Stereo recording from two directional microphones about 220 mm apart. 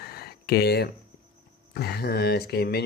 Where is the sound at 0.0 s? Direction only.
45° left (ahead or behind).